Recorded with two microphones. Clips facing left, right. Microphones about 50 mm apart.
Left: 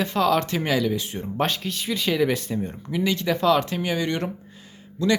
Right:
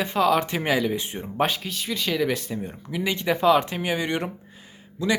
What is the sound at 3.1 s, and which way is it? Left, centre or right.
Speech, centre.